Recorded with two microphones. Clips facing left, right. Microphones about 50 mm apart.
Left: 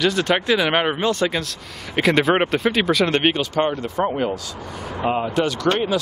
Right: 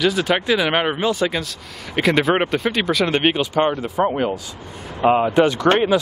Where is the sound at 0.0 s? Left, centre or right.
Centre.